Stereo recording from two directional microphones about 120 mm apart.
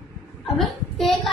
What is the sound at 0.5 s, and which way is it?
Speech, centre (ahead or behind).